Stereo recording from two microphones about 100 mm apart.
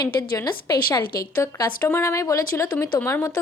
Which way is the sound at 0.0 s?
45° left (ahead or behind).